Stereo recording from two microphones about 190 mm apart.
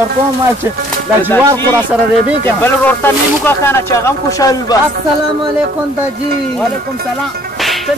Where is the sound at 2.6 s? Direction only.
10° left (ahead or behind).